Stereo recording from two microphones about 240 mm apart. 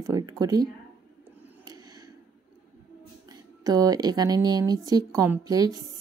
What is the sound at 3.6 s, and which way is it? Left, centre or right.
Speech, centre.